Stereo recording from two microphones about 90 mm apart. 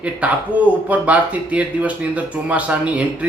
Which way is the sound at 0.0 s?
15° right (ahead or behind).